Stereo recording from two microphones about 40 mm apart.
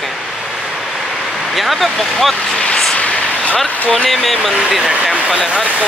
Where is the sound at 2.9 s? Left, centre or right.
Left.